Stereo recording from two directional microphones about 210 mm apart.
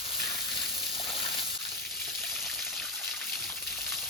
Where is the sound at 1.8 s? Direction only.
Centre (ahead or behind).